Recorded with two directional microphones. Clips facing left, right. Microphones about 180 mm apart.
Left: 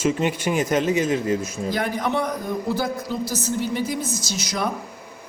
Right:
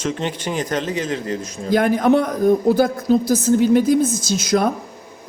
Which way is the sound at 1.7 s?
50° right (ahead or behind).